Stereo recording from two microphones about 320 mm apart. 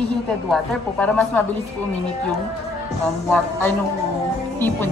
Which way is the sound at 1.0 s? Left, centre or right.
Centre.